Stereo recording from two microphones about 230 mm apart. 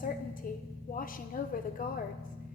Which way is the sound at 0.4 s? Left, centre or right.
Left.